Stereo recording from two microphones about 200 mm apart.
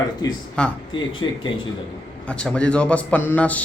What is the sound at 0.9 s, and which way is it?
Speech, 25° left (ahead or behind).